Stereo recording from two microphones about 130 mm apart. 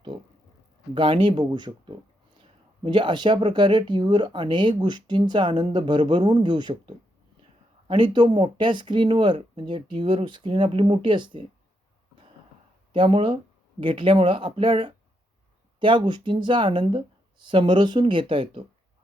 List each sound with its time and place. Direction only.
0.9 s speech: 40° right (ahead or behind)
12.9 s speech: 40° right (ahead or behind)